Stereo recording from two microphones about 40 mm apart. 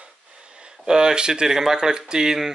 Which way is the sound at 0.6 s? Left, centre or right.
Centre.